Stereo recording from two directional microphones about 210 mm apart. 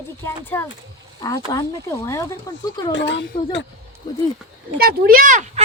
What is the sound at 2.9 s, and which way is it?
Speech, 60° left (ahead or behind).